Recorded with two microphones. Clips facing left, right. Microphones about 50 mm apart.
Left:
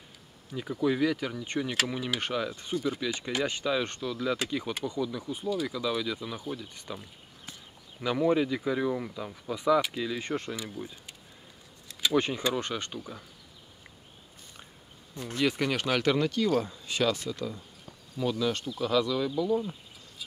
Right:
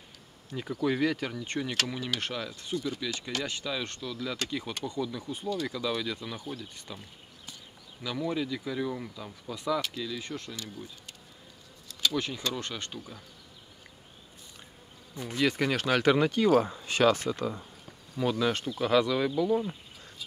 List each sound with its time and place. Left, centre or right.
0.5 s speech: centre
1.3 s speech: centre
8.0 s speech: left
10.5 s speech: centre
15.3 s speech: centre
16.0 s speech: right
16.6 s speech: right